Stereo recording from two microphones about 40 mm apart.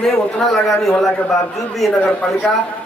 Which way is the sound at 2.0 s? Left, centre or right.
Left.